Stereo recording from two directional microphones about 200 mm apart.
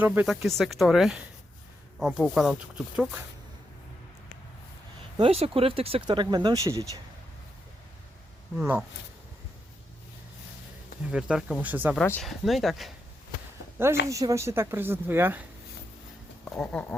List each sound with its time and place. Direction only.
0.0 s speech: 5° right (ahead or behind)
5.1 s speech: 30° right (ahead or behind)
8.5 s speech: 10° right (ahead or behind)
11.1 s speech: 5° right (ahead or behind)
11.9 s speech: 5° left (ahead or behind)
14.1 s speech: 15° right (ahead or behind)
16.4 s a sound: 5° left (ahead or behind)